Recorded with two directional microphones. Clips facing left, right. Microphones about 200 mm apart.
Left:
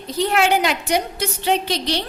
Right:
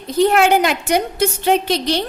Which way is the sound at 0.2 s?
50° right (ahead or behind).